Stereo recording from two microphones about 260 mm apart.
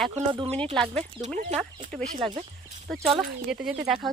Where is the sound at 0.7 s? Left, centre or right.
Centre.